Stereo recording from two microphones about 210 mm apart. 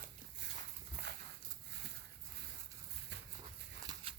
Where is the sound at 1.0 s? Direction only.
50° right (ahead or behind).